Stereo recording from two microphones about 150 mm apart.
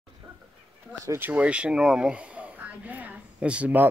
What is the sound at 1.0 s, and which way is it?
Speech, 20° right (ahead or behind).